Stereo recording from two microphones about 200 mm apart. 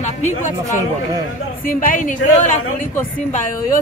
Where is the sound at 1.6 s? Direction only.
45° left (ahead or behind).